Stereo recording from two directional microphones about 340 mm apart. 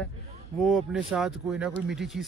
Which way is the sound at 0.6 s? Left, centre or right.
Centre.